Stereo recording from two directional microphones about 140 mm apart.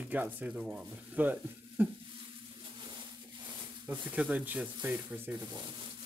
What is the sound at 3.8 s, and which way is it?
Speech, 10° right (ahead or behind).